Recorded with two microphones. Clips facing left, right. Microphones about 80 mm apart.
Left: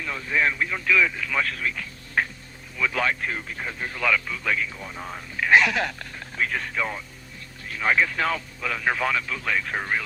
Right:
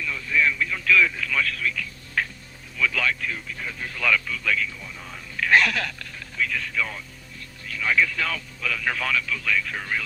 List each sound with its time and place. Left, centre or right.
0.0 s speech: left
0.9 s speech: centre
1.3 s speech: left
4.8 s speech: left
5.4 s speech: centre
5.8 s speech: left